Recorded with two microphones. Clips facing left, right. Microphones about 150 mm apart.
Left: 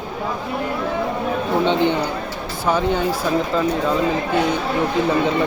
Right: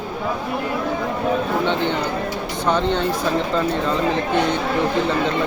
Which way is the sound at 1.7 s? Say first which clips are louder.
Left 3 dB; 15° left (ahead or behind).